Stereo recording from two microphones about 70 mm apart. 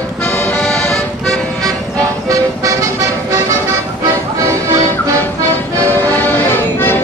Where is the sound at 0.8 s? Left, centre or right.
Centre.